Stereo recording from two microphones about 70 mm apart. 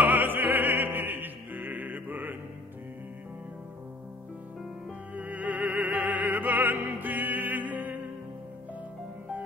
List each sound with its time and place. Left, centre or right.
0.0 s opera: right
5.1 s opera: right